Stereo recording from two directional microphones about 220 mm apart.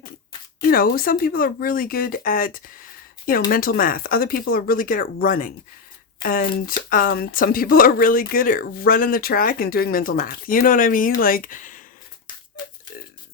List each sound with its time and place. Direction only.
0.7 s speech: 40° left (ahead or behind)